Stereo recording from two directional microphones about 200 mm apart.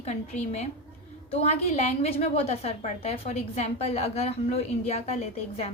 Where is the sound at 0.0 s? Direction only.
35° left (ahead or behind).